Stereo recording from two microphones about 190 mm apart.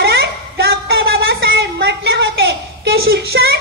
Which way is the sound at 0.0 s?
55° right (ahead or behind).